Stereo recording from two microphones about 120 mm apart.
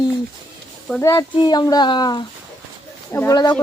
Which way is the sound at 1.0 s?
25° left (ahead or behind).